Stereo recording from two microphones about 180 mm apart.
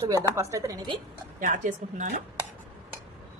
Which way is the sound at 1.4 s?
45° right (ahead or behind).